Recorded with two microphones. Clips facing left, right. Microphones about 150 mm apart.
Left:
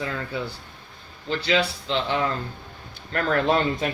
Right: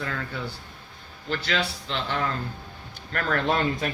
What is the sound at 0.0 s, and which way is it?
Speech, 5° left (ahead or behind).